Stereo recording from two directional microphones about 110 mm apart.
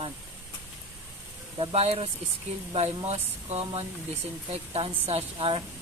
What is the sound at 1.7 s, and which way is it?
Speech, 65° right (ahead or behind).